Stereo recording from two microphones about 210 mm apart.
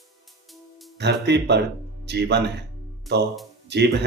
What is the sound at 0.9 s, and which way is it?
Speech, 55° right (ahead or behind).